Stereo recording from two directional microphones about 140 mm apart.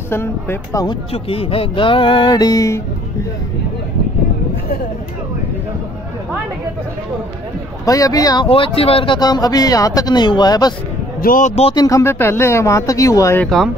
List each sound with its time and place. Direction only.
0.1 s speech: 15° left (ahead or behind)
1.1 s speech: 40° left (ahead or behind); by 2.8 s 25° left (ahead or behind)
7.8 s speech: 25° left (ahead or behind)
8.5 s speech: 40° left (ahead or behind)
11.1 s speech: 80° left
11.7 s speech: 30° left (ahead or behind)
12.0 s speech: 15° left (ahead or behind)
13.4 s speech: centre (ahead or behind)